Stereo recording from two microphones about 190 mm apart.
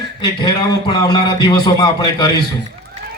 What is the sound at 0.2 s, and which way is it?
A man's voice, 25° left (ahead or behind).